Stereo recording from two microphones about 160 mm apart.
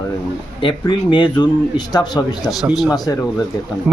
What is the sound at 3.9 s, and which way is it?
Speech, 10° right (ahead or behind).